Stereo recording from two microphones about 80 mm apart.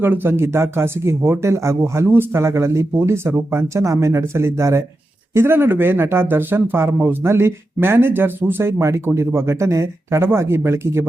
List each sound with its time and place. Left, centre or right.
0.0 s speech: right